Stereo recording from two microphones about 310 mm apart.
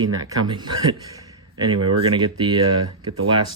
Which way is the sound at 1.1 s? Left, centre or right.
Centre.